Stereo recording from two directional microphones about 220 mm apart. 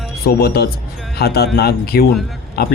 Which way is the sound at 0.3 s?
45° left (ahead or behind).